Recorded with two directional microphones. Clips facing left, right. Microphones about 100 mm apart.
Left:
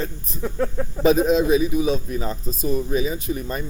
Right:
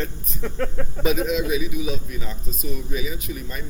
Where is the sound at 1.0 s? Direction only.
35° left (ahead or behind).